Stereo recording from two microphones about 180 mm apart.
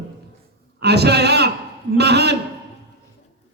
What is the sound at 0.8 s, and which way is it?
A man's voice, 65° right (ahead or behind).